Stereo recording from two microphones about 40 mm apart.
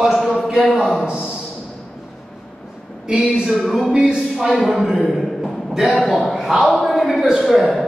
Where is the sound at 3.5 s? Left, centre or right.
Centre.